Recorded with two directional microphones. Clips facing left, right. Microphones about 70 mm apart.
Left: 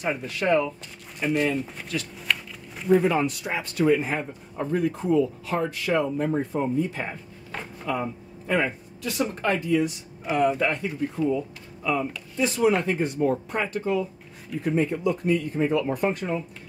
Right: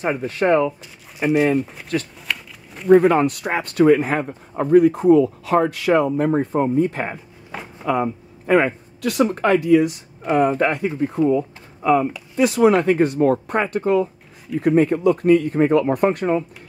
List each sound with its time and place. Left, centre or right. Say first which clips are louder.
0.0 s speech: right 6 dB; right
2.1 s a sound: even; centre
2.9 s speech: right 7 dB; right
10.3 s speech: right 5 dB; right
11.1 s speech: right 8 dB; right
12.4 s speech: right 7 dB; right